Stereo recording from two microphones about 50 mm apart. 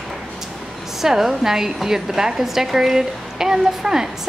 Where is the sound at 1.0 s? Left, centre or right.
Centre.